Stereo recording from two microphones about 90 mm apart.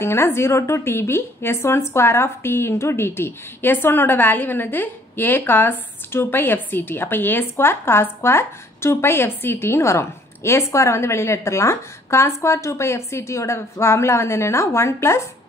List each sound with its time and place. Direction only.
0.0 s a woman's voice: 30° left (ahead or behind)